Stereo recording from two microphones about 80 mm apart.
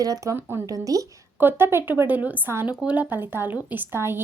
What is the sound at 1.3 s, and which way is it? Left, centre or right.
A woman's voice, right.